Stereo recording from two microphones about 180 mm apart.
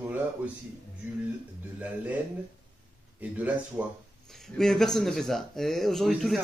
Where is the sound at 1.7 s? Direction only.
10° right (ahead or behind).